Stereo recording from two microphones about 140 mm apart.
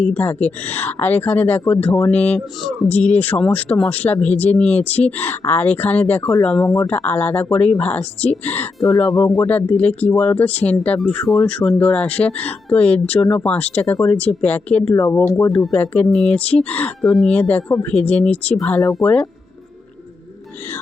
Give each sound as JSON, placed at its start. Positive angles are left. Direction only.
{"t": 0.0, "sound": "speech", "side_deg": 10}